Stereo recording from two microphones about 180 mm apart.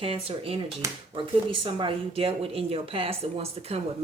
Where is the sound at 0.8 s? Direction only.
15° right (ahead or behind).